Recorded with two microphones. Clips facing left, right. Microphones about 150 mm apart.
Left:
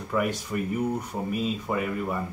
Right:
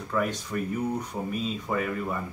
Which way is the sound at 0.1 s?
10° left (ahead or behind).